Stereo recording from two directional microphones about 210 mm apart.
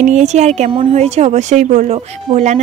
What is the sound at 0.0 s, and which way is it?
Speech, 35° right (ahead or behind).